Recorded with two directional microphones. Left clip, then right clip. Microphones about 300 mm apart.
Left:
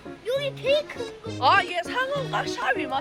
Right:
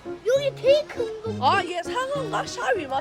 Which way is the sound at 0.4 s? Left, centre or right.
Right.